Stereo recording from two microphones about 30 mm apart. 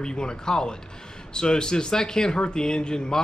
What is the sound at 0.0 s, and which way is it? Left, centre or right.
A man's voice, left.